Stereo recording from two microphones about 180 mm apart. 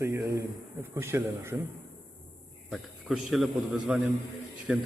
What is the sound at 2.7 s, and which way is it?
A man's voice, centre (ahead or behind).